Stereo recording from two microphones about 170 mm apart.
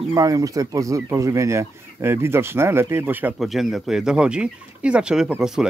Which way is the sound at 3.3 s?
Centre (ahead or behind).